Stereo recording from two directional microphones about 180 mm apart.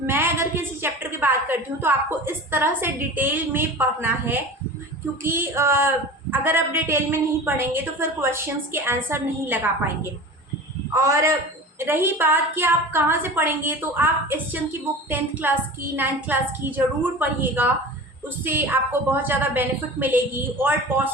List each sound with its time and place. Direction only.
0.0 s a woman's voice: 10° right (ahead or behind)
10.9 s a woman's voice: 15° right (ahead or behind)